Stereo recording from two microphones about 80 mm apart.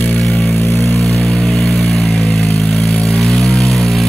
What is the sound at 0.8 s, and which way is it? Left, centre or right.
Vehicle, centre.